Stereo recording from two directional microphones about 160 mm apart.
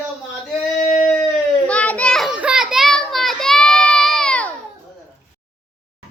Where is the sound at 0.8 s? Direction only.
50° left (ahead or behind).